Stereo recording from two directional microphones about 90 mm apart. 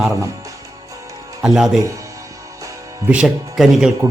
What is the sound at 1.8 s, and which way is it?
Speech, 35° right (ahead or behind).